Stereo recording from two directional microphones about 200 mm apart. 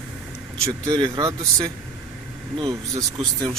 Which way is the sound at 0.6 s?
20° right (ahead or behind).